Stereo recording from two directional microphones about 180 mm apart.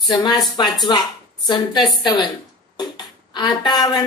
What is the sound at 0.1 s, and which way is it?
A woman's voice, 25° left (ahead or behind).